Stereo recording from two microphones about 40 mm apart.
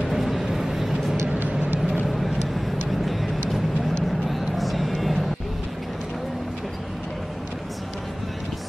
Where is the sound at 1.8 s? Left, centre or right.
Right.